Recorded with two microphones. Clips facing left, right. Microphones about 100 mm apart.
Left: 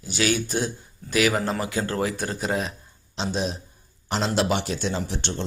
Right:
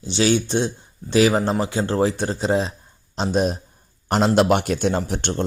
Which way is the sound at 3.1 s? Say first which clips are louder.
Right 6 dB; 45° right (ahead or behind).